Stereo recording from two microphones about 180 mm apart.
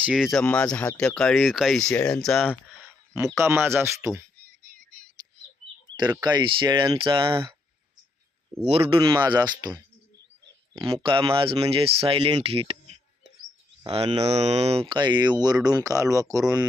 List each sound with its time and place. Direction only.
0.0 s speech: 5° right (ahead or behind)
3.3 s speech: 15° right (ahead or behind)
6.2 s speech: 25° right (ahead or behind)
8.6 s speech: 35° right (ahead or behind)
10.8 s speech: 25° right (ahead or behind)
13.8 s speech: 30° right (ahead or behind)